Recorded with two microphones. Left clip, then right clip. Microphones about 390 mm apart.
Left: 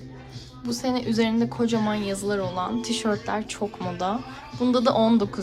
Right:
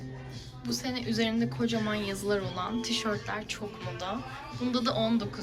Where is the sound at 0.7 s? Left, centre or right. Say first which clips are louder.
Left 7 dB; centre.